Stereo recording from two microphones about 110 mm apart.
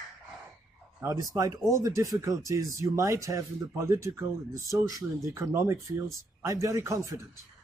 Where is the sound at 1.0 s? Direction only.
30° right (ahead or behind).